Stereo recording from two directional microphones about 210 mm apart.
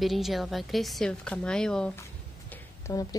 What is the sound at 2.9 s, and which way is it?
Speech, 15° left (ahead or behind).